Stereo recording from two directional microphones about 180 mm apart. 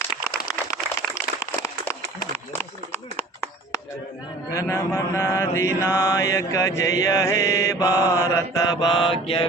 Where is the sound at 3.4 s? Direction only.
15° left (ahead or behind).